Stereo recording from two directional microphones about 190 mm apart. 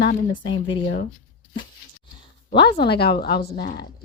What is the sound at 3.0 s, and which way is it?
Speech, 55° left (ahead or behind).